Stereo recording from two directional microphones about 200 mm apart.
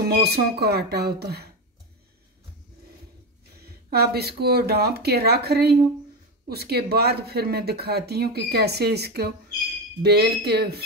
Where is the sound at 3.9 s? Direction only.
50° right (ahead or behind).